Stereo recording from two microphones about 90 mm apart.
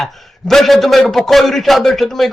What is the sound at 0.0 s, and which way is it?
A man's voice, centre (ahead or behind).